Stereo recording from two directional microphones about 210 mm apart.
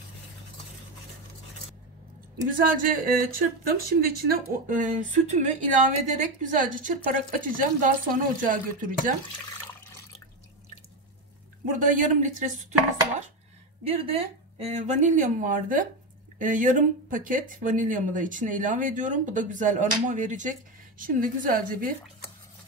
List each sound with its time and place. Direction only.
2.5 s speech: 40° right (ahead or behind)
11.6 s speech: 40° right (ahead or behind)
13.8 s speech: 30° right (ahead or behind)